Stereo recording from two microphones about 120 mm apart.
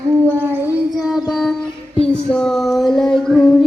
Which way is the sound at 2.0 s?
5° left (ahead or behind).